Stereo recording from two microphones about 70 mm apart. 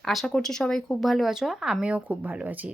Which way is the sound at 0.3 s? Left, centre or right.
Centre.